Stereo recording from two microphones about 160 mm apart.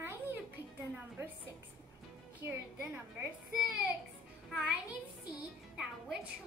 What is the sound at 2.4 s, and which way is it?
Speech, 15° right (ahead or behind).